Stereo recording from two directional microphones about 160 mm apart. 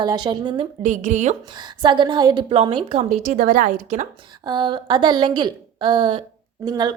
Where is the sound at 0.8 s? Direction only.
50° right (ahead or behind).